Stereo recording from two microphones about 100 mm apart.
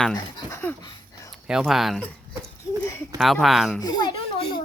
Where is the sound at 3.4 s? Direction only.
Centre (ahead or behind).